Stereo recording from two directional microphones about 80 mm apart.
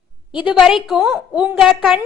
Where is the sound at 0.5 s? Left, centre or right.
Centre.